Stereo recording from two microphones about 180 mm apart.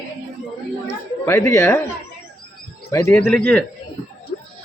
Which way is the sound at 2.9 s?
15° left (ahead or behind).